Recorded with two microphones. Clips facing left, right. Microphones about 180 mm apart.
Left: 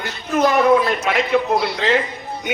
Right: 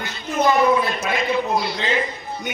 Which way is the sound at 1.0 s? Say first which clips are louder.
Left 4 dB; 75° left (ahead or behind).